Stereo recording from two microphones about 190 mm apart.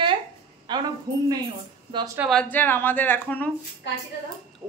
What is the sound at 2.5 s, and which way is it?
Speech, 10° left (ahead or behind).